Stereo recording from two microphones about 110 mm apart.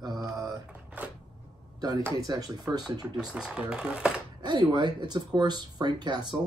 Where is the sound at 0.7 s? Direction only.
15° right (ahead or behind).